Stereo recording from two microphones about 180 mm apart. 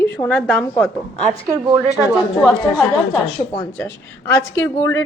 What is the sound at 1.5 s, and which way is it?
Speech, 15° right (ahead or behind).